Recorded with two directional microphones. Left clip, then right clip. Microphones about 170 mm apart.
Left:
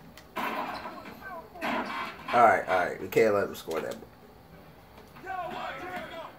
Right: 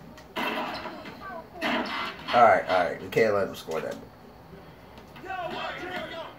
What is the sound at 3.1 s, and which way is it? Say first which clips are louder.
Speech: left 1 dB; 60° left (ahead or behind).